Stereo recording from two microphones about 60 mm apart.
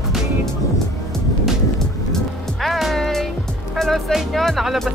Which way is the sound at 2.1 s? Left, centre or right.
Centre.